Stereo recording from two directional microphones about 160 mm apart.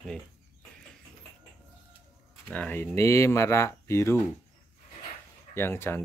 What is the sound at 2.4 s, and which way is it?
Speech, 10° left (ahead or behind).